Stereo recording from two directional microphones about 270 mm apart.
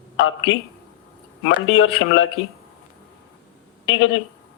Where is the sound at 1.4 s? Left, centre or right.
Left.